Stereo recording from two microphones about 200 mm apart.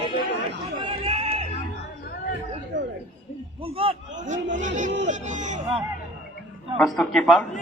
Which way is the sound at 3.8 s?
25° right (ahead or behind).